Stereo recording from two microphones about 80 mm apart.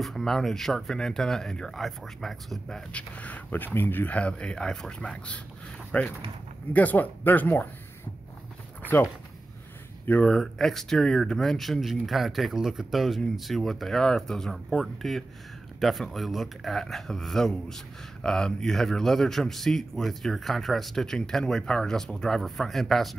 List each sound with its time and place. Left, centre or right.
0.0 s speech: centre
2.9 s speech: centre
10.0 s speech: centre